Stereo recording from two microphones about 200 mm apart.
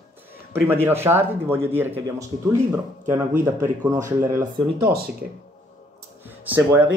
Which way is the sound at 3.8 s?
15° right (ahead or behind).